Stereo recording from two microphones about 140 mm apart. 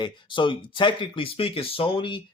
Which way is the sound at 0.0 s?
35° left (ahead or behind).